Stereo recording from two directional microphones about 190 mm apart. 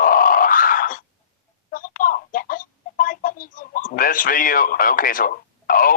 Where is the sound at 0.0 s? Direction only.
50° left (ahead or behind).